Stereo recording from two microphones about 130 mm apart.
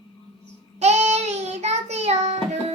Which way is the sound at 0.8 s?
60° right (ahead or behind).